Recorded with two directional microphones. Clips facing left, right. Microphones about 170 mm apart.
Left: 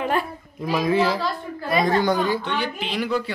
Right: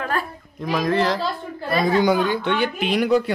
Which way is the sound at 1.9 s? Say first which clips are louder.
Right 4 dB; 10° right (ahead or behind).